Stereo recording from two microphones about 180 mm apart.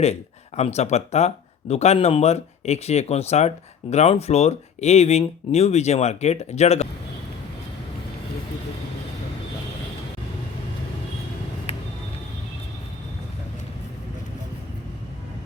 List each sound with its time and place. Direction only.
0.0 s speech: 35° left (ahead or behind)